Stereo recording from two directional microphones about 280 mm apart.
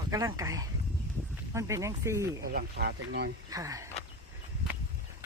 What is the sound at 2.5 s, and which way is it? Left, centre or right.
Speech, right.